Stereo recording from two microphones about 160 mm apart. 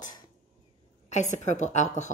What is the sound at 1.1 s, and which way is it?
A woman's voice, 45° left (ahead or behind).